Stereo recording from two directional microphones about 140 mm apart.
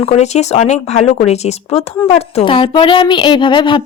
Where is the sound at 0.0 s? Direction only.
50° left (ahead or behind).